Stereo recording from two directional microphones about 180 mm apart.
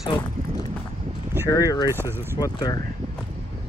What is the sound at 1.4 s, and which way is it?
Speech, 20° left (ahead or behind).